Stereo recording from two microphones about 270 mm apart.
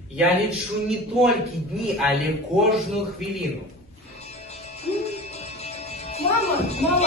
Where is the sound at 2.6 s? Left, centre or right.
Centre.